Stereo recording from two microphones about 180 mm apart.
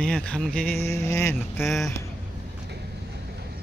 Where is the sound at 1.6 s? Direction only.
Centre (ahead or behind).